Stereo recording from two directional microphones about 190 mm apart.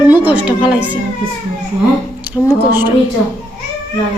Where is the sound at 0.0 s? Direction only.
10° right (ahead or behind).